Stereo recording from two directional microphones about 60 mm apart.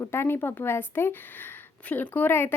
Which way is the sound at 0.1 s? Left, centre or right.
Left.